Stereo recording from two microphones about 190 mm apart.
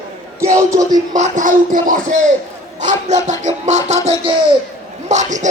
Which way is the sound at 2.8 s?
40° right (ahead or behind).